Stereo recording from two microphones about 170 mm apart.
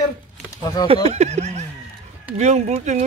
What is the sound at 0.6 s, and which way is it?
Speech, 25° left (ahead or behind).